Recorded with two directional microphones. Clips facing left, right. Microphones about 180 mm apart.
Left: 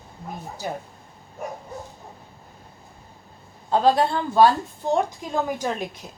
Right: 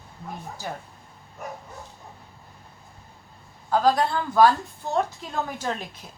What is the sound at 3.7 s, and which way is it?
Speech, 25° left (ahead or behind).